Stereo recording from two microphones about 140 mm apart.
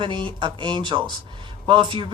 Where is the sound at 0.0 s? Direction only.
35° right (ahead or behind).